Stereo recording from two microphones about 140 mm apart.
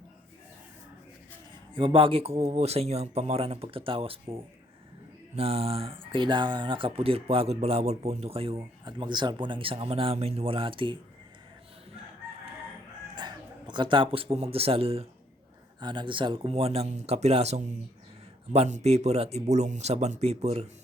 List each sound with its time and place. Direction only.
1.7 s speech: 40° right (ahead or behind)
5.4 s speech: 45° right (ahead or behind)
8.8 s speech: 30° right (ahead or behind)
13.1 s speech: 30° right (ahead or behind)
15.8 s speech: 35° right (ahead or behind)